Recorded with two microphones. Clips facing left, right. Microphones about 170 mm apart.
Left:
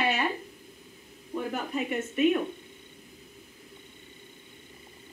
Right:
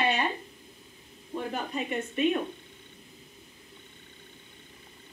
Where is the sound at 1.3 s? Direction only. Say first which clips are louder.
Left 1 dB; 25° right (ahead or behind).